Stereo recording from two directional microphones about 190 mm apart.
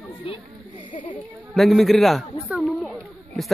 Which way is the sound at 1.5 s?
Centre (ahead or behind).